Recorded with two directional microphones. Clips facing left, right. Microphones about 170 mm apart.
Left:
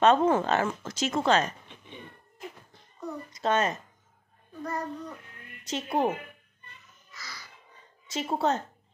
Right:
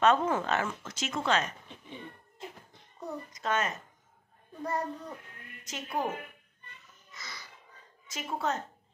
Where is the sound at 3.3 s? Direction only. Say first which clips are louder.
Left 6 dB; 30° left (ahead or behind).